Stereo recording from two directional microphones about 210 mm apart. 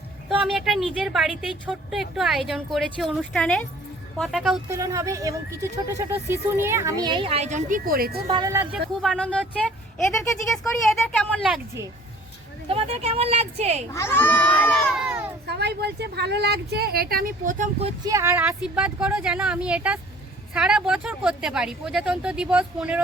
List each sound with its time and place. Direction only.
0.3 s a woman's voice: centre (ahead or behind)
4.7 s speech: 15° right (ahead or behind); by 8.2 s 45° right (ahead or behind)
8.3 s speech: 15° right (ahead or behind)
9.0 s a woman's voice: centre (ahead or behind)
12.6 s speech: 25° right (ahead or behind)
13.9 s a child's voice: 10° left (ahead or behind)
15.4 s speech: 50° right (ahead or behind); by 18.1 s 30° right (ahead or behind)
18.1 s a woman's voice: 10° right (ahead or behind)